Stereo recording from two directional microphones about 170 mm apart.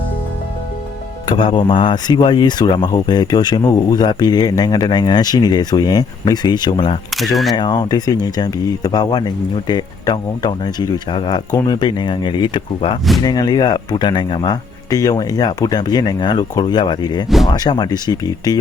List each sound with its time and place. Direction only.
1.3 s speech: 30° left (ahead or behind)
17.2 s speech: centre (ahead or behind)
17.5 s speech: 25° left (ahead or behind)